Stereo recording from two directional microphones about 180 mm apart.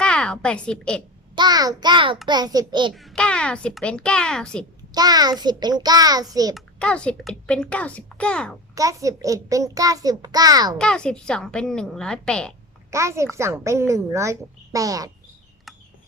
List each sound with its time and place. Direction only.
0.0 s a woman's voice: 5° left (ahead or behind)
1.4 s a child's voice: 20° right (ahead or behind)
2.9 s a child's voice: centre (ahead or behind)
4.9 s a child's voice: 20° right (ahead or behind)
6.5 s a child's voice: 5° left (ahead or behind)
8.7 s a child's voice: 20° right (ahead or behind)
10.8 s a child's voice: 5° left (ahead or behind)
12.9 s a woman's voice: 15° right (ahead or behind)